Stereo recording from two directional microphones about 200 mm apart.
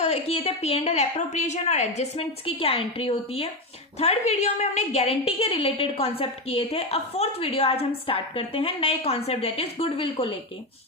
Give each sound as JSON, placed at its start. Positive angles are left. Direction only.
{"t": 0.0, "sound": "a woman's voice", "side_deg": 30}